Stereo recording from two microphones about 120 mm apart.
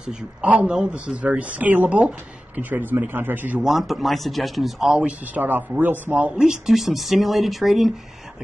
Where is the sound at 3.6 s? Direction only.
Centre (ahead or behind).